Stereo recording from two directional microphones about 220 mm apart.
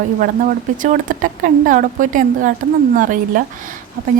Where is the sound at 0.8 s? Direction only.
35° right (ahead or behind).